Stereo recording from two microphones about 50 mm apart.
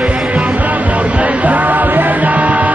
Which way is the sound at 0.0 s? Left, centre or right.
Right.